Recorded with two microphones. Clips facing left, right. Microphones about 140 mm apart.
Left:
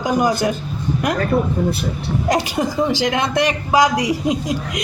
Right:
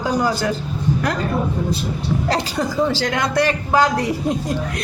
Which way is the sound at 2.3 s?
15° left (ahead or behind).